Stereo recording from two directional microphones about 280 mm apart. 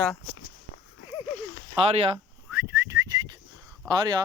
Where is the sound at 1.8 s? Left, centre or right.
Centre.